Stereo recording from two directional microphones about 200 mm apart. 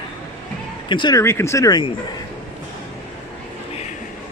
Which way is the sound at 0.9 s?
25° left (ahead or behind).